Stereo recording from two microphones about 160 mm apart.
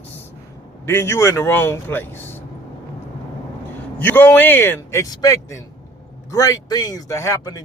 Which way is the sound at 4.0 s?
10° left (ahead or behind).